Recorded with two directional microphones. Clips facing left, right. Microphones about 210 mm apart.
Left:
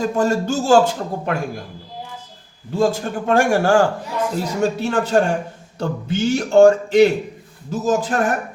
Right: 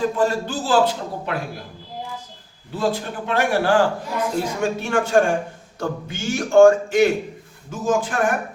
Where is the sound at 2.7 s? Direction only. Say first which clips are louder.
Left 5 dB; 45° left (ahead or behind).